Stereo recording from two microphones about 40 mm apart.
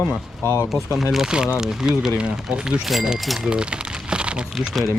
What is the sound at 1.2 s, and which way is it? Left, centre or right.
Speech, centre.